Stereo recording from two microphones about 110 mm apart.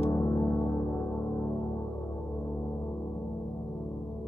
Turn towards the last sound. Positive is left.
turn(degrees=25)  # may be behind; listen again after turning